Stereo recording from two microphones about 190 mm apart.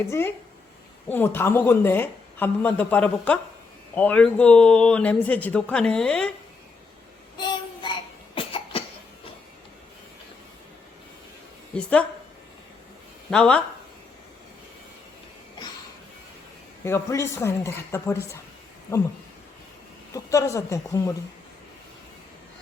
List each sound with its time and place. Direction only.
0.1 s speech: 10° left (ahead or behind)
7.3 s child singing: 25° left (ahead or behind)
8.4 s cough: 30° left (ahead or behind)
11.7 s speech: 5° left (ahead or behind)
13.3 s speech: 5° left (ahead or behind)
16.8 s speech: 15° left (ahead or behind)
20.1 s speech: 15° left (ahead or behind)